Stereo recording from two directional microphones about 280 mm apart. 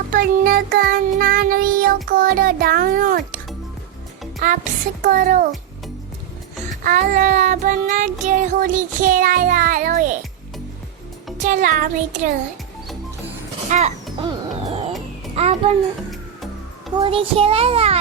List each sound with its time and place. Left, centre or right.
0.1 s a child's voice: right
4.4 s child singing: right
6.7 s child singing: right
11.3 s speech: right
13.7 s a sound: right
15.4 s child singing: right
16.9 s child singing: centre